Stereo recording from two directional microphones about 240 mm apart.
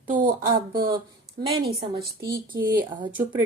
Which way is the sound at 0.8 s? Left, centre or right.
Centre.